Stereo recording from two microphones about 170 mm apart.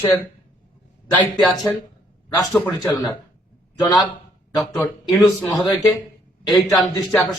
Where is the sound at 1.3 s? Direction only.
5° left (ahead or behind).